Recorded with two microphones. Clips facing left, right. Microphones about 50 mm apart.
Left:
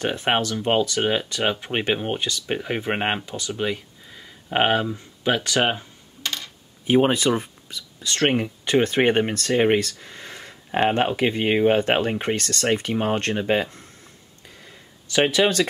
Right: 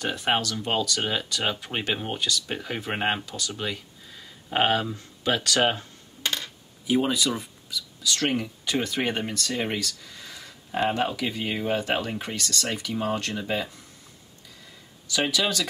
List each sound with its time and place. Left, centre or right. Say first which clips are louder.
0.0 s speech: left 3 dB; left
6.9 s speech: left 6 dB; left
14.5 s a sound: left 4 dB; left